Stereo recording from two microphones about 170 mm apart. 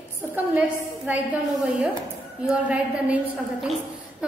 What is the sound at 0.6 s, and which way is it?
Speech, 10° right (ahead or behind).